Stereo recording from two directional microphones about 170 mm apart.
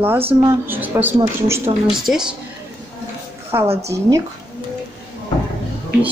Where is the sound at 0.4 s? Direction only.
15° right (ahead or behind).